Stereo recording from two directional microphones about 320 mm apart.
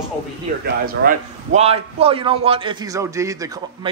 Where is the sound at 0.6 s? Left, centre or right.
Right.